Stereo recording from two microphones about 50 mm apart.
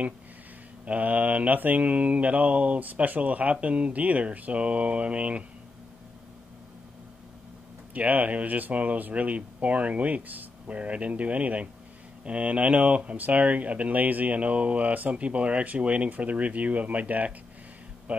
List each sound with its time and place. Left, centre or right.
0.8 s speech: right
7.9 s speech: right